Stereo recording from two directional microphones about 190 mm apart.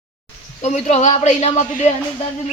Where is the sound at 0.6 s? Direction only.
35° left (ahead or behind).